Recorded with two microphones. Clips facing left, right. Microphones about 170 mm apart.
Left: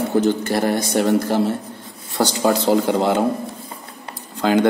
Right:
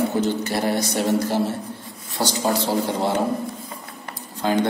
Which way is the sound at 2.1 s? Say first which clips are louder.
Left 4 dB; 70° left (ahead or behind).